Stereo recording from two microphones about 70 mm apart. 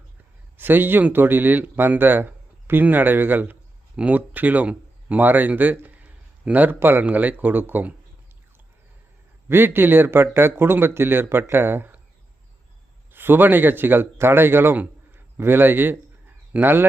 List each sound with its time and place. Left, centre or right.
0.5 s speech: right
9.5 s speech: right
13.1 s speech: right